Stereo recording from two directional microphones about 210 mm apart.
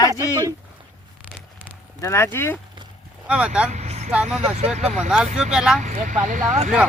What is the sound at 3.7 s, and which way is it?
Vehicle, 30° right (ahead or behind).